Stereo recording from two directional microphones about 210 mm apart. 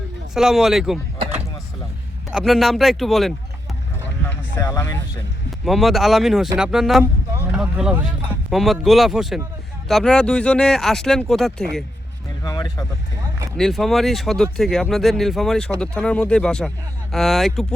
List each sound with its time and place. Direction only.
0.3 s speech: centre (ahead or behind)
2.3 s speech: centre (ahead or behind)
4.5 s speech: 15° left (ahead or behind)
5.6 s speech: centre (ahead or behind)
12.5 s speech: 15° left (ahead or behind)
13.6 s speech: centre (ahead or behind)